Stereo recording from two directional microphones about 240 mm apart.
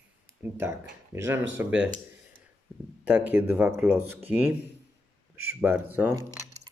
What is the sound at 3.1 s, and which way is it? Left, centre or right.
Speech, centre.